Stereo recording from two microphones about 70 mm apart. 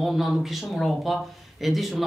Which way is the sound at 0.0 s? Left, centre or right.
Centre.